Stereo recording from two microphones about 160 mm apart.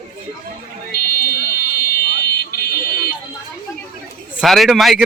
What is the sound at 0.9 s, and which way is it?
Buzzer, 75° left (ahead or behind).